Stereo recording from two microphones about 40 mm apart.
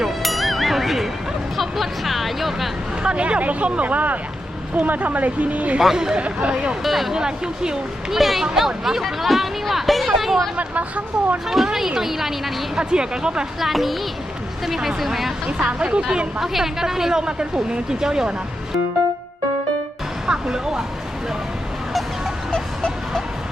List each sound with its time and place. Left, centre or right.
0.0 s music: centre
1.5 s speech: centre
3.0 s speech: right
6.8 s speech: centre
7.1 s speech: centre
8.1 s speech: centre
10.6 s speech: right
11.4 s speech: centre
12.7 s speech: right
13.6 s speech: centre
15.8 s speech: right
16.4 s speech: centre
20.2 s speech: centre